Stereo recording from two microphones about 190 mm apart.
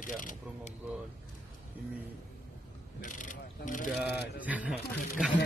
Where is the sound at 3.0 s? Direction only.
45° left (ahead or behind).